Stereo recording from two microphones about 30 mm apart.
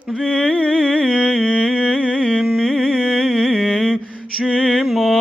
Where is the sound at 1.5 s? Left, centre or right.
Left.